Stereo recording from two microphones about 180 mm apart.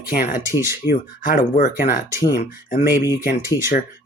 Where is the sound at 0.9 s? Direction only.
55° left (ahead or behind).